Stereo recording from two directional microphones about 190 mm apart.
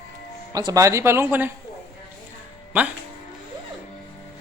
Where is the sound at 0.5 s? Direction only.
20° right (ahead or behind).